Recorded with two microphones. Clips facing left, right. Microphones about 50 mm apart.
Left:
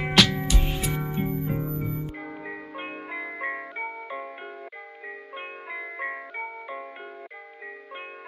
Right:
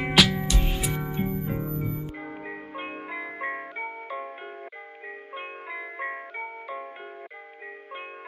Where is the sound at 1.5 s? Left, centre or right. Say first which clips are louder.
Left 1 dB; right.